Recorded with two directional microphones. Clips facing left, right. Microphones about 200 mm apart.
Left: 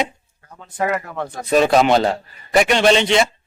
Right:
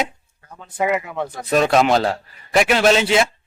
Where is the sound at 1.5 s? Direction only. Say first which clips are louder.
Left 2 dB; centre (ahead or behind).